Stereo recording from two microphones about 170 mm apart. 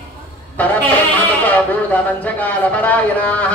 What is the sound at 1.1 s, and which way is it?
Speech, 10° left (ahead or behind).